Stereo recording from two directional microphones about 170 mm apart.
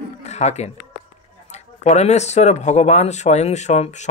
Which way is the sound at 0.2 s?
40° left (ahead or behind).